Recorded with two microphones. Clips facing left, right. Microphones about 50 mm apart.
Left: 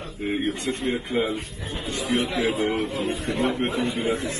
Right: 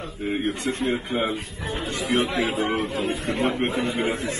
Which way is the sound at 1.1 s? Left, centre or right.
Right.